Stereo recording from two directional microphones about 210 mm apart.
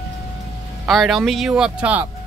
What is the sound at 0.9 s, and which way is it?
Speech, centre (ahead or behind).